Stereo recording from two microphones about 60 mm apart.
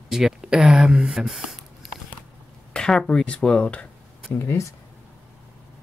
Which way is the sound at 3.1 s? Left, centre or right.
Centre.